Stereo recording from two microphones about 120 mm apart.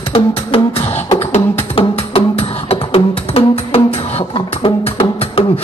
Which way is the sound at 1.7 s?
55° left (ahead or behind).